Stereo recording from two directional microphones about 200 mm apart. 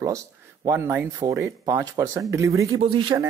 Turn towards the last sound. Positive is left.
turn(degrees=-25)  # may be behind; listen again after turning